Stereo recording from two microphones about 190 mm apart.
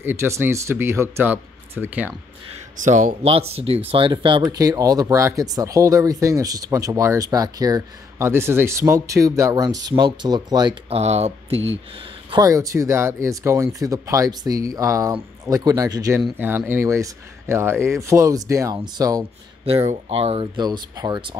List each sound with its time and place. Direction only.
0.0 s speech: 15° right (ahead or behind)
2.8 s speech: 40° right (ahead or behind)
12.3 s speech: 20° right (ahead or behind)
16.2 s speech: 5° right (ahead or behind)
19.9 s speech: 30° right (ahead or behind)